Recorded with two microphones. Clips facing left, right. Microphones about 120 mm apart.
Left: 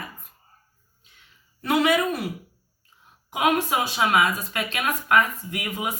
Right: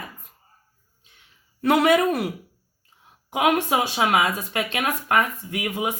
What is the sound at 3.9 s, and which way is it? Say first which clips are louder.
Speech: left 1 dB; 40° right (ahead or behind).